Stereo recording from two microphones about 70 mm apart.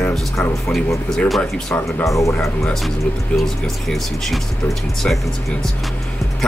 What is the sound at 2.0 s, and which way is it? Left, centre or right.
Speech, left.